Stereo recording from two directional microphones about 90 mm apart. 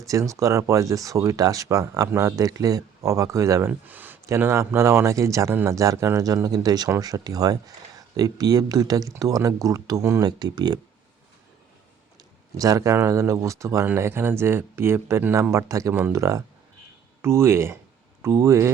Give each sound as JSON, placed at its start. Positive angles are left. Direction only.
{"t": 0.1, "sound": "speech", "side_deg": -35}
{"t": 3.7, "sound": "speech", "side_deg": -20}
{"t": 4.4, "sound": "speech", "side_deg": -30}
{"t": 10.2, "sound": "speech", "side_deg": -50}
{"t": 12.5, "sound": "speech", "side_deg": -40}
{"t": 16.1, "sound": "speech", "side_deg": -35}